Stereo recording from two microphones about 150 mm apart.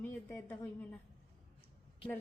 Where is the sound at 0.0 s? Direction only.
10° left (ahead or behind).